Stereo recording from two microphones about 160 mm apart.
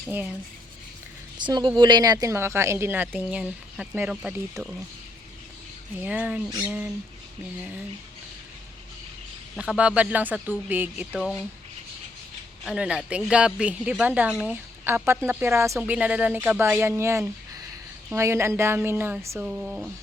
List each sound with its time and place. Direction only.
0.1 s speech: 10° right (ahead or behind)
1.4 s speech: 30° right (ahead or behind); by 4.7 s 5° right (ahead or behind)
6.0 s speech: 10° right (ahead or behind)
9.7 s speech: 10° right (ahead or behind)
12.6 s speech: 5° right (ahead or behind)